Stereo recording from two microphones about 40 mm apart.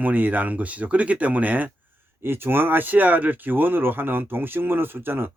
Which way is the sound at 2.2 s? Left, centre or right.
Right.